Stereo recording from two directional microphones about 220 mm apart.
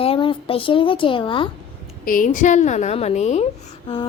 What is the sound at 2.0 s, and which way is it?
A woman's voice, 35° left (ahead or behind).